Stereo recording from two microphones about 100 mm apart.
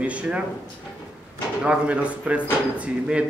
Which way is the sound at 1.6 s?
10° right (ahead or behind).